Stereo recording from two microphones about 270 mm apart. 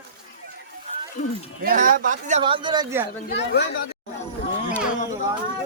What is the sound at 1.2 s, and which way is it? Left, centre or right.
Speech, left.